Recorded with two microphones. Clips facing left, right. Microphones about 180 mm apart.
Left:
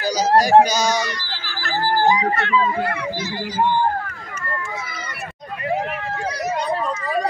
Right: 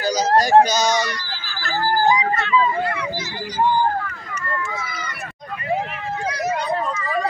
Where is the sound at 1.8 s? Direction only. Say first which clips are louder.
Even; 30° left (ahead or behind).